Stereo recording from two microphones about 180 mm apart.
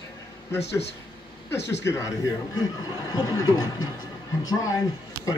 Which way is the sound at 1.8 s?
15° left (ahead or behind).